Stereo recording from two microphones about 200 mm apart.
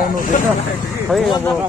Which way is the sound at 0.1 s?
40° left (ahead or behind).